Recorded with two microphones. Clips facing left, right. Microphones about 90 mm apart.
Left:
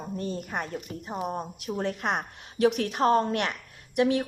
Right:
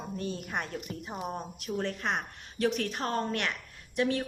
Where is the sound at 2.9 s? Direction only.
15° left (ahead or behind).